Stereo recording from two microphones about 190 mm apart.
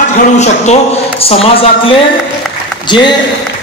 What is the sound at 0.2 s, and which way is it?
Speech, 35° left (ahead or behind).